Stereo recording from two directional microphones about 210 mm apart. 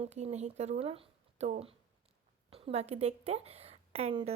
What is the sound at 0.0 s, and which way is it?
A woman's voice, 30° right (ahead or behind).